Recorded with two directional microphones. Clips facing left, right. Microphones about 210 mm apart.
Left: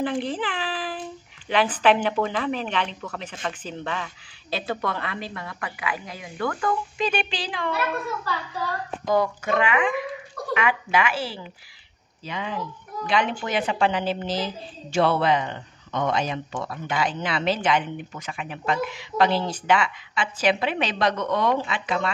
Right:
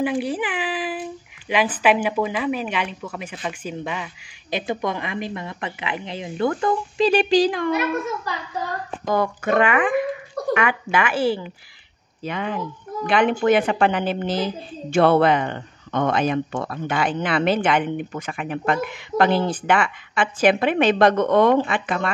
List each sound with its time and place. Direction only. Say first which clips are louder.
0.0 s a child's voice: right 3 dB; 10° right (ahead or behind); by 7.7 s 45° right (ahead or behind)
9.0 s speech: right 1 dB; 55° right (ahead or behind)